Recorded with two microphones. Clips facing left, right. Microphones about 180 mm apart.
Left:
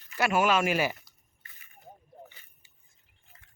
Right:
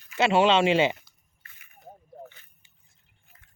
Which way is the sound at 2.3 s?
5° left (ahead or behind).